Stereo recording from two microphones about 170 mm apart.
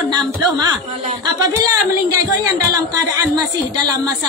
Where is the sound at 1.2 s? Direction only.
20° right (ahead or behind).